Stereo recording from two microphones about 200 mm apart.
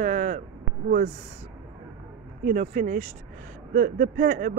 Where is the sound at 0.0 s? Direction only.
40° right (ahead or behind).